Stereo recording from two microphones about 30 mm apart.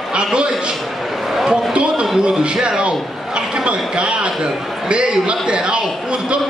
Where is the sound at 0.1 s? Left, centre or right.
Right.